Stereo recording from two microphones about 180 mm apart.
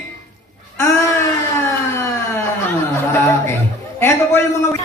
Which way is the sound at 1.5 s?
15° left (ahead or behind).